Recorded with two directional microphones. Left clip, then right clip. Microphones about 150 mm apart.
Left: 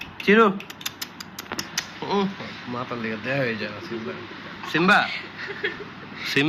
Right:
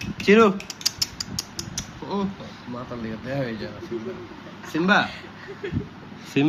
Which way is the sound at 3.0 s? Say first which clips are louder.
Left 4 dB; 30° left (ahead or behind).